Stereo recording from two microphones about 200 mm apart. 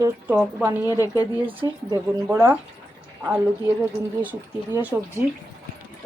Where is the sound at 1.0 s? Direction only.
15° left (ahead or behind).